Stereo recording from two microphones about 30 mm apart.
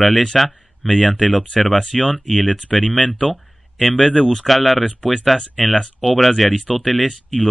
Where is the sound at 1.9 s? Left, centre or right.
Centre.